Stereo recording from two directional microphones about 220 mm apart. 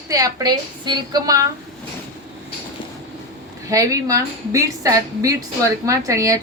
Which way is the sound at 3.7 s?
15° right (ahead or behind).